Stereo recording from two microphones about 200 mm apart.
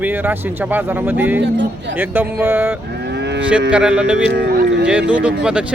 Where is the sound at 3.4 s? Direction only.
5° right (ahead or behind).